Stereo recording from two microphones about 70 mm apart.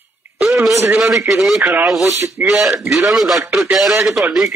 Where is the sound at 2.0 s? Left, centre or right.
Right.